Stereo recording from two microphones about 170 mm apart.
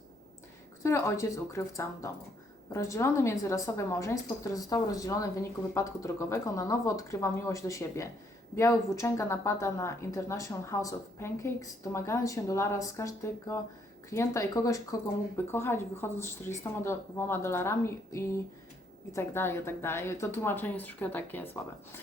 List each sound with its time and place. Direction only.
0.8 s a woman's voice: 15° left (ahead or behind)